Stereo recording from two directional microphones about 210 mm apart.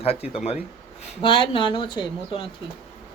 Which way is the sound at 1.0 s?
25° left (ahead or behind).